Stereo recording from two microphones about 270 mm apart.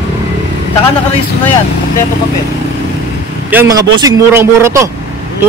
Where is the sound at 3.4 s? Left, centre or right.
Centre.